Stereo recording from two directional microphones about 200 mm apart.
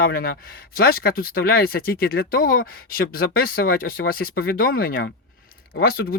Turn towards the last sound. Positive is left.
turn(degrees=50)  # may be behind; listen again after turning